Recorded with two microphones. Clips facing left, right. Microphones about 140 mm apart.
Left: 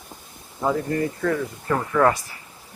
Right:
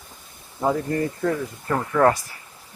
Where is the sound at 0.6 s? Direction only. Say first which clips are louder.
Even; 25° right (ahead or behind).